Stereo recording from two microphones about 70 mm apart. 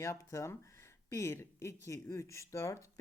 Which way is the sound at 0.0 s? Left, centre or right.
Left.